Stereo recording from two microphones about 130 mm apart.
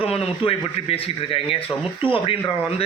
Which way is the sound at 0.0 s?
45° left (ahead or behind).